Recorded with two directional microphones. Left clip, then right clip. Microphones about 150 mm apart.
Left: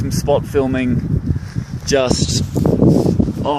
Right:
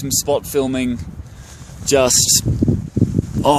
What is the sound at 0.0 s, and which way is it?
Speech, 25° right (ahead or behind).